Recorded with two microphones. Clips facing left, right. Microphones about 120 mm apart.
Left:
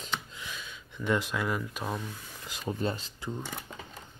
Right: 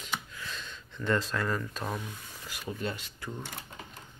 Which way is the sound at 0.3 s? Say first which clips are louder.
Right 1 dB; 15° left (ahead or behind).